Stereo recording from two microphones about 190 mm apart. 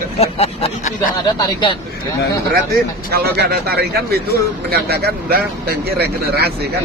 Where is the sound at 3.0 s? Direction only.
55° right (ahead or behind).